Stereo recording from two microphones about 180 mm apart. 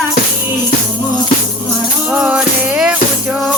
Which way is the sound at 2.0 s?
5° right (ahead or behind).